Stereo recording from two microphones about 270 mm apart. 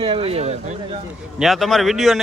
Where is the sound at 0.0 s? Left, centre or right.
Right.